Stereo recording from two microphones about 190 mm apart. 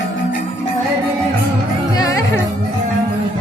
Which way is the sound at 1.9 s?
20° left (ahead or behind).